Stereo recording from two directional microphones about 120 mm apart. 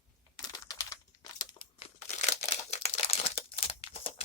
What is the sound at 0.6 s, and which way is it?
Typing, 30° left (ahead or behind).